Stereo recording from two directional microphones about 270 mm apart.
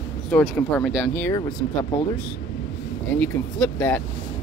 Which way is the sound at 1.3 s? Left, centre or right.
Left.